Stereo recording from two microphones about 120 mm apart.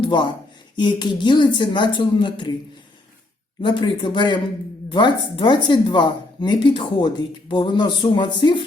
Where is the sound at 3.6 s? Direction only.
40° left (ahead or behind).